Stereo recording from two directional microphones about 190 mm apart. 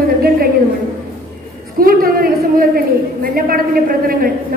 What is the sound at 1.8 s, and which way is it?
A woman's voice, 50° right (ahead or behind).